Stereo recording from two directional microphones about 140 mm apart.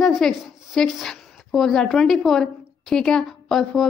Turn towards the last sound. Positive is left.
turn(degrees=0)  # may be behind; listen again after turning